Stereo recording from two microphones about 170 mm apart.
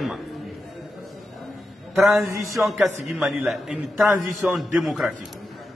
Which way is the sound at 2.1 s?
20° right (ahead or behind).